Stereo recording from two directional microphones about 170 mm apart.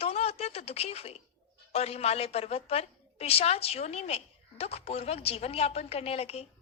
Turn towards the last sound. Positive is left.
turn(degrees=40)  # may be behind; listen again after turning